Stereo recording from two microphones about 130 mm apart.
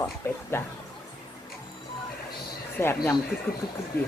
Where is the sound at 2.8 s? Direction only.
20° left (ahead or behind).